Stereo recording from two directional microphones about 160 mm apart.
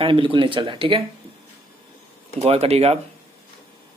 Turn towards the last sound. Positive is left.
turn(degrees=-40)  # may be behind; listen again after turning